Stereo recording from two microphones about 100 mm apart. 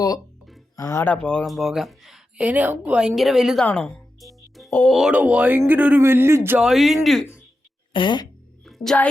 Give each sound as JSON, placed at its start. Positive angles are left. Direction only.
{"t": 0.8, "sound": "speech", "side_deg": 35}
{"t": 1.0, "sound": "speech", "side_deg": 10}
{"t": 1.5, "sound": "speech", "side_deg": 0}
{"t": 2.5, "sound": "speech", "side_deg": -15}
{"t": 3.2, "sound": "speech", "side_deg": 0}
{"t": 3.6, "sound": "music", "side_deg": 10}
{"t": 4.9, "sound": "speech", "side_deg": 0}
{"t": 5.1, "sound": "speech", "side_deg": -15}
{"t": 6.6, "sound": "speech", "side_deg": 0}
{"t": 7.9, "sound": "speech", "side_deg": 50}
{"t": 8.6, "sound": "music", "side_deg": 0}